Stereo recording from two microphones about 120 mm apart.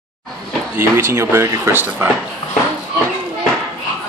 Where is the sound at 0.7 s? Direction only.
20° right (ahead or behind).